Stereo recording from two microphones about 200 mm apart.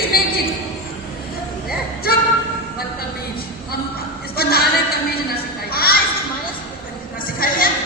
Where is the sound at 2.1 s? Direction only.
50° left (ahead or behind).